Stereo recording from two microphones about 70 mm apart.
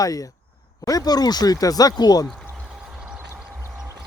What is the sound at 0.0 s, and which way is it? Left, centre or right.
Speech, left.